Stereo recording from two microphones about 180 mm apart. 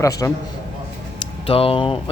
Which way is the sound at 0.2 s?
15° left (ahead or behind).